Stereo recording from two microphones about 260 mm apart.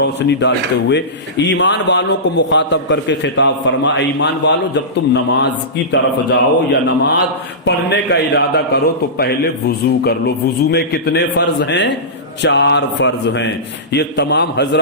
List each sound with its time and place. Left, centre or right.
0.0 s a man's voice: left